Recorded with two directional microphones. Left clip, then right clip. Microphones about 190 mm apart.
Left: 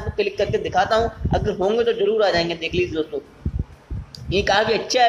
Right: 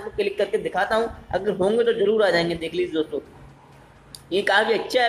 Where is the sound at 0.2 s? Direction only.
Centre (ahead or behind).